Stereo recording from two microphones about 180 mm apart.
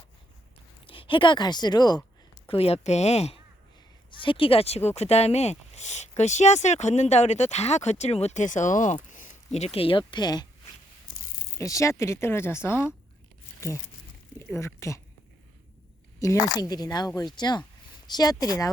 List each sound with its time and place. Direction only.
0.9 s speech: 30° left (ahead or behind)
2.5 s speech: 35° left (ahead or behind)
11.5 s speech: 15° left (ahead or behind)
14.3 s speech: 15° left (ahead or behind)
16.2 s speech: 20° left (ahead or behind)